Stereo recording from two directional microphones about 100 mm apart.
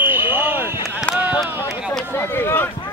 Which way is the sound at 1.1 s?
15° left (ahead or behind).